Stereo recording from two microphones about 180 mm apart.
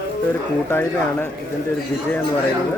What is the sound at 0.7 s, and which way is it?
Speech, 10° left (ahead or behind).